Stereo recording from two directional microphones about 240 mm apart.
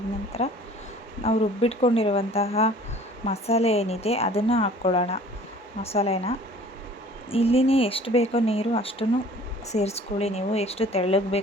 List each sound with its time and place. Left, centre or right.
0.3 s a woman's voice: left